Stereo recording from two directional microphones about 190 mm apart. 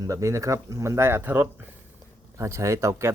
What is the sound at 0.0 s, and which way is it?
Speech, 15° right (ahead or behind).